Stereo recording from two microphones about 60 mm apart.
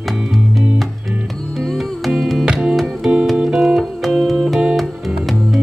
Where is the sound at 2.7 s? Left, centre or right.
Centre.